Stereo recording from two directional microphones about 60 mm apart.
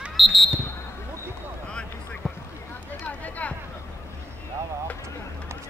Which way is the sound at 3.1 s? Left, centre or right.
Left.